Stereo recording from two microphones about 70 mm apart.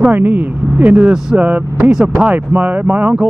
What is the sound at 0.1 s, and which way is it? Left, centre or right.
Speech, right.